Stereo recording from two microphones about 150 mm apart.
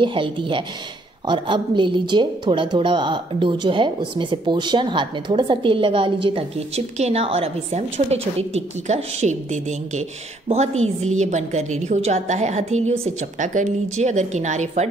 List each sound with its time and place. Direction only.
0.0 s a woman's voice: 35° right (ahead or behind); by 14.9 s 50° right (ahead or behind)